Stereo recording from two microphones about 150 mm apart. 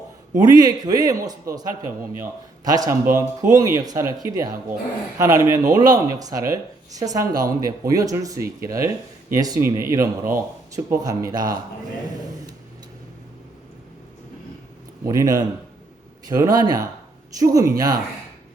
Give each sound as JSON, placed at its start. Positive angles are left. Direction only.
{"t": 0.3, "sound": "speech", "side_deg": -25}
{"t": 15.0, "sound": "speech", "side_deg": -20}